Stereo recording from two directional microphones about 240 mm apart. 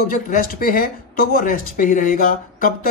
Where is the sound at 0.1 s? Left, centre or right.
Left.